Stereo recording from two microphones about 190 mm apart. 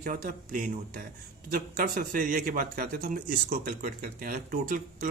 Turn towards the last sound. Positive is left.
turn(degrees=-45)  # may be behind; listen again after turning